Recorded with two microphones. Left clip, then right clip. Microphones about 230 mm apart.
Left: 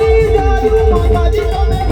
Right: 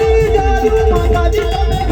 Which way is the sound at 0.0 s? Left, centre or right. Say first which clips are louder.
Left 1 dB; right.